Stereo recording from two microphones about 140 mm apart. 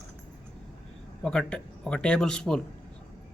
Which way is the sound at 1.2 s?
5° left (ahead or behind).